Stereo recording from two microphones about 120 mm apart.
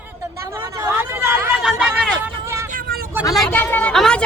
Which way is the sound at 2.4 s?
25° right (ahead or behind).